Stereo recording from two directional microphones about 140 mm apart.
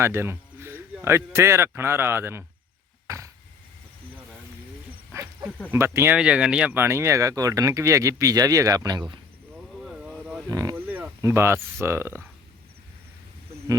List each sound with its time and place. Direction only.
0.0 s speech: 15° right (ahead or behind)
3.1 s a sound: 20° right (ahead or behind)
5.7 s speech: 20° right (ahead or behind)
6.1 s speech: 5° right (ahead or behind); by 9.2 s 30° right (ahead or behind)
9.6 s vehicle: 5° right (ahead or behind)
10.5 s speech: 25° right (ahead or behind)
10.8 s speech: 15° right (ahead or behind)